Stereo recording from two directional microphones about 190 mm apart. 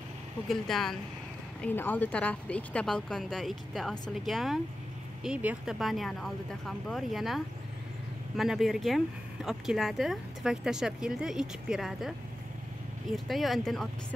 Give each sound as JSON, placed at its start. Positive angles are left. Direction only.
{"t": 0.5, "sound": "speech", "side_deg": 0}
{"t": 13.1, "sound": "speech", "side_deg": 0}